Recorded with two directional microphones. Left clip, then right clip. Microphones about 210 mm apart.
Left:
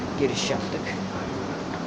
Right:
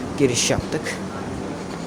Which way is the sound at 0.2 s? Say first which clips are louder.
Right 6 dB; 55° right (ahead or behind).